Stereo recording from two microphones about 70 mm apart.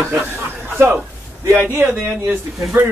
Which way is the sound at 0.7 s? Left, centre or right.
Right.